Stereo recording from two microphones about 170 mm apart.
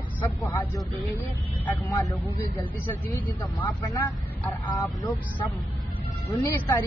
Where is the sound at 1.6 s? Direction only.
10° left (ahead or behind).